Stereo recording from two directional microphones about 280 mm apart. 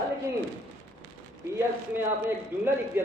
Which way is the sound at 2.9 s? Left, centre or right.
Centre.